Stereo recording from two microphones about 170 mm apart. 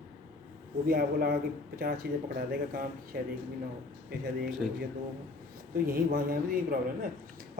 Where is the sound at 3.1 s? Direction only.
70° right (ahead or behind).